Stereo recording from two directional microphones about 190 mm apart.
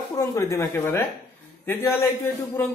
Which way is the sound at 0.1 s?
15° left (ahead or behind).